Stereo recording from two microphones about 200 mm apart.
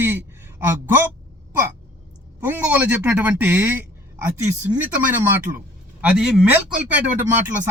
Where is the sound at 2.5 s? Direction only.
10° right (ahead or behind).